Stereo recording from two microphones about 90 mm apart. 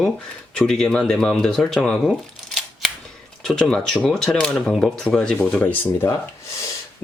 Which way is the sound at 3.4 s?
10° left (ahead or behind).